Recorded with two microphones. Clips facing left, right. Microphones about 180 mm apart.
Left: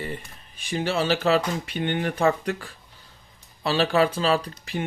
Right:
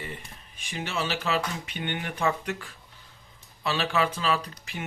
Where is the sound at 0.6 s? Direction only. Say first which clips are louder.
Left 7 dB; 35° left (ahead or behind).